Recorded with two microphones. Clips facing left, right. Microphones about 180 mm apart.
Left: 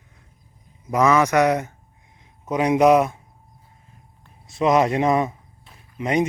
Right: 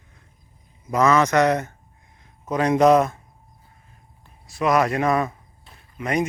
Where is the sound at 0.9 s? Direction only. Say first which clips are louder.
Even; 15° left (ahead or behind).